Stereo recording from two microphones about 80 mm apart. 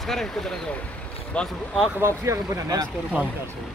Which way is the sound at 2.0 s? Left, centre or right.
Right.